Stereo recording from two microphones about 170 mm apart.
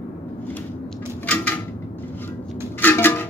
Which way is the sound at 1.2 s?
10° left (ahead or behind).